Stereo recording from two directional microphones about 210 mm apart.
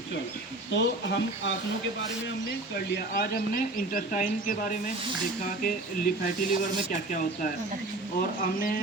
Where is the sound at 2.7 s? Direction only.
45° left (ahead or behind).